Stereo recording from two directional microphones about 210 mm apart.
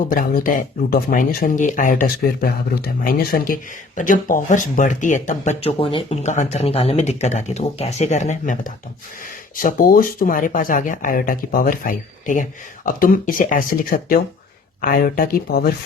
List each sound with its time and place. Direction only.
0.1 s speech: 40° left (ahead or behind)